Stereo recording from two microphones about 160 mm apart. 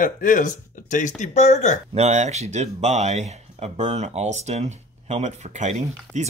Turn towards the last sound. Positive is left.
turn(degrees=-45)  # may be behind; listen again after turning